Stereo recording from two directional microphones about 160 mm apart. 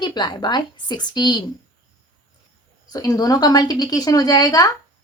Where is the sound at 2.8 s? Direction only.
25° left (ahead or behind).